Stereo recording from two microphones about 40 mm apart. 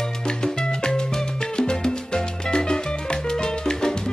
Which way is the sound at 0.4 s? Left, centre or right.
Centre.